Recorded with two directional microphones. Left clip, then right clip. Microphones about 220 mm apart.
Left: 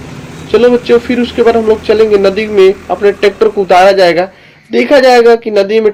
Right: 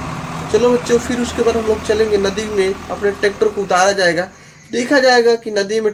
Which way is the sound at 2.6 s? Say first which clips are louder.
Left 11 dB; 25° left (ahead or behind).